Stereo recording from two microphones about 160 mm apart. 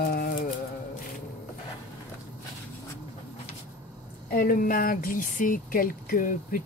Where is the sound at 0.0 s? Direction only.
65° left (ahead or behind).